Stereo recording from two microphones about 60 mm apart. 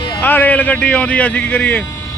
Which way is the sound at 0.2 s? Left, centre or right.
Left.